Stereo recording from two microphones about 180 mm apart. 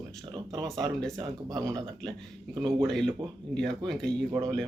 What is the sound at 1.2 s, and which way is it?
Speech, 20° right (ahead or behind).